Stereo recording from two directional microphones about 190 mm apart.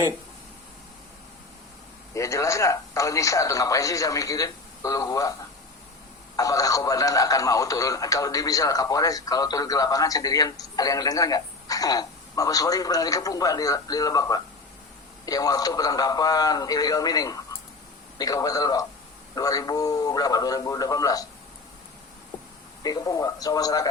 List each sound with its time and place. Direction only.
2.1 s speech: 15° left (ahead or behind)
6.3 s speech: 20° left (ahead or behind)
22.8 s speech: 20° left (ahead or behind)